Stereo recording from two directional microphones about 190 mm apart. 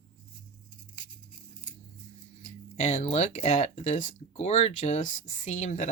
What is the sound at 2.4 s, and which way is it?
Speech, 40° left (ahead or behind).